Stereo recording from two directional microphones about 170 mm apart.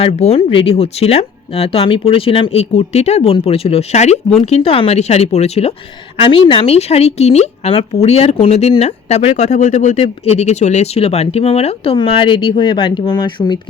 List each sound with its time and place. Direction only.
0.0 s a woman's voice: 35° left (ahead or behind)